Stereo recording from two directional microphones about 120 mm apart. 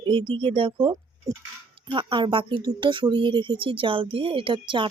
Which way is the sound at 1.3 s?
30° right (ahead or behind).